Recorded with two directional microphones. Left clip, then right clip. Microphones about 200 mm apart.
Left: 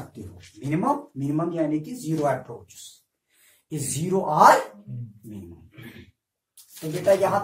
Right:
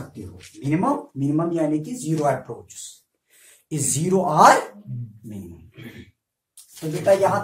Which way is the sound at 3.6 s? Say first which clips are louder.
Right 5 dB; 35° right (ahead or behind).